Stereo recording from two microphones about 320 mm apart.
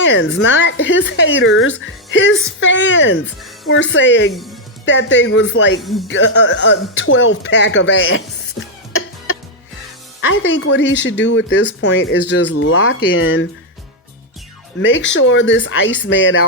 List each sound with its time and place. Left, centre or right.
0.0 s speech: left
8.9 s cough: left
10.2 s speech: left
14.8 s speech: left